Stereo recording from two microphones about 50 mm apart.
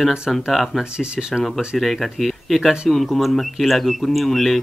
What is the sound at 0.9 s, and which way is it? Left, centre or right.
Speech, centre.